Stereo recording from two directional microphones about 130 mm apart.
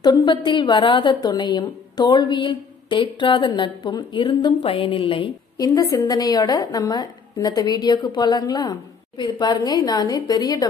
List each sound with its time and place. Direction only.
0.0 s a woman's voice: 35° left (ahead or behind)
4.6 s music: 45° left (ahead or behind)
5.6 s a woman's voice: 25° left (ahead or behind)